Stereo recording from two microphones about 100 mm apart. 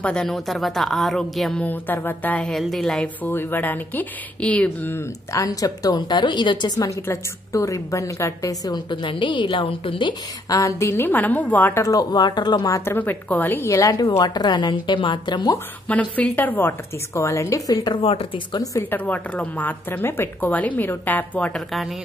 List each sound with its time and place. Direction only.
0.0 s a woman's voice: 5° left (ahead or behind)
1.6 s a woman's voice: 15° left (ahead or behind)
2.4 s a woman's voice: centre (ahead or behind)
3.3 s a woman's voice: 20° left (ahead or behind)
4.9 s a woman's voice: 30° left (ahead or behind)
8.9 s a woman's voice: 55° left (ahead or behind)
10.5 s a woman's voice: 30° left (ahead or behind)
11.8 s a woman's voice: 35° left (ahead or behind)
12.9 s a woman's voice: 20° left (ahead or behind); by 15.5 s 50° left (ahead or behind)
15.9 s a woman's voice: 15° left (ahead or behind); by 17.9 s 35° left (ahead or behind)
17.9 s speech: 65° left (ahead or behind)
18.5 s a woman's voice: 35° left (ahead or behind)
18.8 s a woman's voice: 20° left (ahead or behind)